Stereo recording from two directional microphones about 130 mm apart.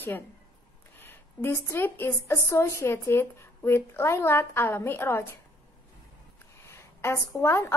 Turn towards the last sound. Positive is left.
turn(degrees=20)  # may be behind; listen again after turning